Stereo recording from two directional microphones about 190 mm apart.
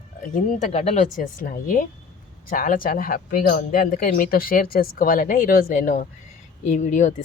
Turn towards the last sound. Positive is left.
turn(degrees=40)  # may be behind; listen again after turning